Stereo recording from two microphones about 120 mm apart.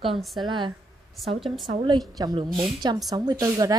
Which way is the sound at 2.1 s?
35° right (ahead or behind).